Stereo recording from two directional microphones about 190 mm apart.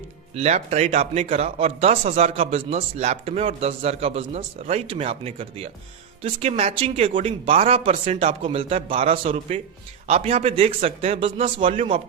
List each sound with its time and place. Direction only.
0.3 s a man's voice: 35° right (ahead or behind)